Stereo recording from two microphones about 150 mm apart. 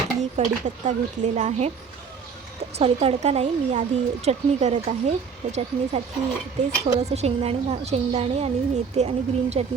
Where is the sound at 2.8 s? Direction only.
45° right (ahead or behind).